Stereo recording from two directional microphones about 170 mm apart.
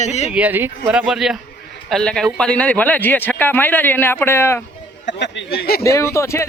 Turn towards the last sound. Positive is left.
turn(degrees=15)  # may be behind; listen again after turning